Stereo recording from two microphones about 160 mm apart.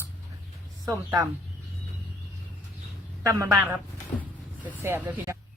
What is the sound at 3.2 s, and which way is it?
A woman's voice, 20° right (ahead or behind).